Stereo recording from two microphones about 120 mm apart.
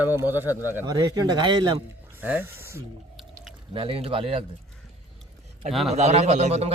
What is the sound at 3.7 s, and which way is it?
Speech, 50° right (ahead or behind).